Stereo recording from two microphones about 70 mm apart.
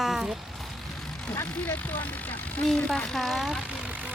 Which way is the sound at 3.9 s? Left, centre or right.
Right.